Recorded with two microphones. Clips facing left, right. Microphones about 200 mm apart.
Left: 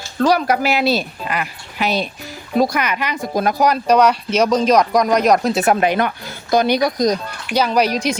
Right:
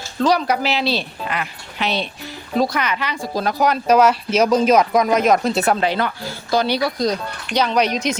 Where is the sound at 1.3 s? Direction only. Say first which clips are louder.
Left 4 dB; 5° left (ahead or behind).